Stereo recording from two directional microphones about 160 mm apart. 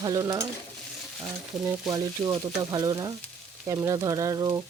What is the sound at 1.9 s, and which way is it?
Speech, 25° right (ahead or behind).